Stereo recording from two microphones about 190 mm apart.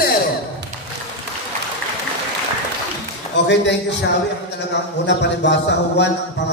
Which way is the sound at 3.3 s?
70° left (ahead or behind).